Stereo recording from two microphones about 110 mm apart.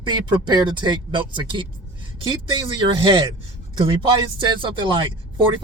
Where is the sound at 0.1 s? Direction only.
45° right (ahead or behind).